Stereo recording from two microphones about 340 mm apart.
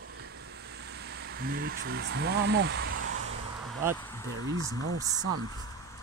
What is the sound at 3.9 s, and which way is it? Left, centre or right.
Speech, centre.